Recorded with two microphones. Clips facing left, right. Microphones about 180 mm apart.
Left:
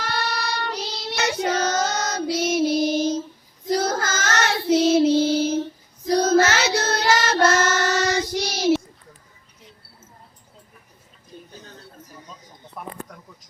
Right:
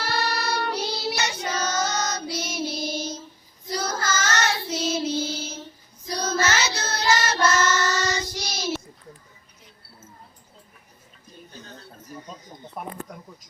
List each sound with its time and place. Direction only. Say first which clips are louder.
0.0 s child singing: even; 5° right (ahead or behind)
1.1 s child singing: left 6 dB; 60° left (ahead or behind)
12.8 s a sound: right 1 dB; 20° right (ahead or behind)